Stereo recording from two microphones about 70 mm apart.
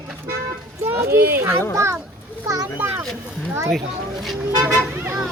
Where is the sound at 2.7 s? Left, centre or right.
Right.